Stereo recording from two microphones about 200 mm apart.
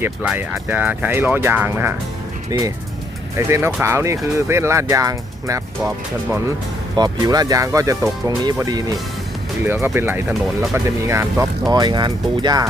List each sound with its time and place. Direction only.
0.0 s speech: 10° right (ahead or behind)
6.9 s speech: 20° right (ahead or behind)